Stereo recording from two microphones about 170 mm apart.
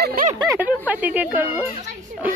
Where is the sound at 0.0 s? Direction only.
60° right (ahead or behind).